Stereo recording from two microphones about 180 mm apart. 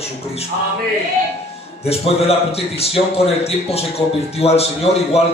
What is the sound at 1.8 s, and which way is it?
A man's voice, 35° left (ahead or behind).